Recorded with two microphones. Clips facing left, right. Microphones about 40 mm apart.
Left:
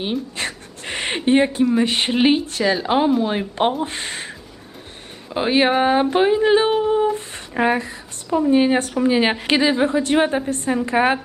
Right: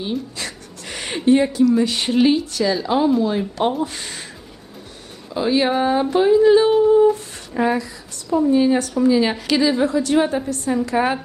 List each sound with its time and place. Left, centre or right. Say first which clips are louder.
0.0 s a woman's voice: left 2 dB; left